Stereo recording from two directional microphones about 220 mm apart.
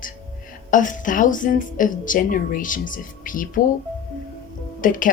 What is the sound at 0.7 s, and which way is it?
Speech, 35° left (ahead or behind).